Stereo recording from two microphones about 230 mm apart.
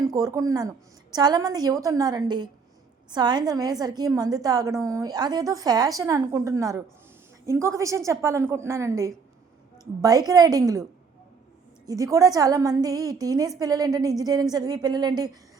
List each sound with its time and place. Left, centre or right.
0.0 s a woman's voice: centre
11.9 s a woman's voice: centre